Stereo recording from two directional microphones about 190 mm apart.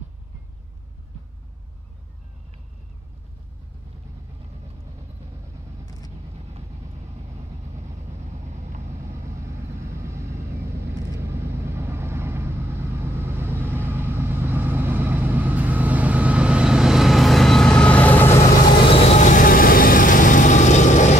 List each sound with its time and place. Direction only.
8.5 s vehicle: 40° right (ahead or behind)
10.0 s vehicle: 15° right (ahead or behind); by 18.4 s 10° left (ahead or behind)
19.0 s vehicle: 40° left (ahead or behind)